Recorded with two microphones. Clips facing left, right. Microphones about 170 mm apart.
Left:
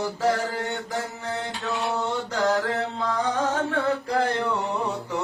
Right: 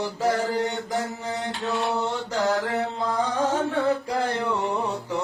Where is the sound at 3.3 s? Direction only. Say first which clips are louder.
Right 1 dB; 10° right (ahead or behind).